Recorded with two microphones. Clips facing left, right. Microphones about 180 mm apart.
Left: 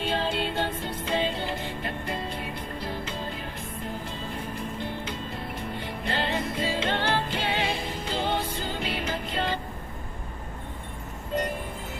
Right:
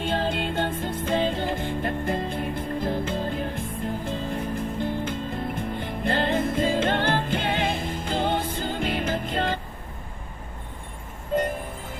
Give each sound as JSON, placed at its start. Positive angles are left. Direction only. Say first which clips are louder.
{"t": 0.0, "sound": "music", "louder": "right 2 dB", "side_deg": -50}
{"t": 11.3, "sound": "music", "louder": "right 4 dB", "side_deg": -50}